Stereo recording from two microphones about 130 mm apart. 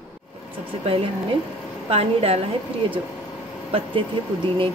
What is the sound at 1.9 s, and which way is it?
Speech, 50° right (ahead or behind).